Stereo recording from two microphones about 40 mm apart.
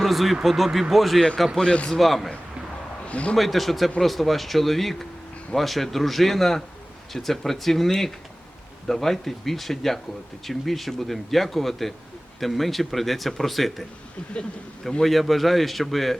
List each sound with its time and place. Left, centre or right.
0.0 s speech: centre
1.5 s speech: left
1.9 s speech: centre
3.1 s a man's voice: left
3.3 s speech: centre
15.0 s speech: centre